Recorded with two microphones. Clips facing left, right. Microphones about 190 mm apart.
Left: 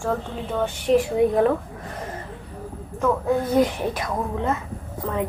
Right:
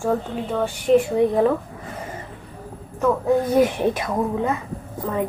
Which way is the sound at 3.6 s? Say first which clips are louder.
Right 3 dB; 20° right (ahead or behind).